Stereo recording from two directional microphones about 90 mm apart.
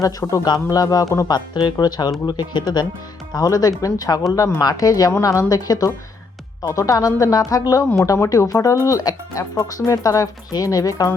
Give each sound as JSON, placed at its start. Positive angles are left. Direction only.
{"t": 0.0, "sound": "speech", "side_deg": 40}
{"t": 3.3, "sound": "speech", "side_deg": 45}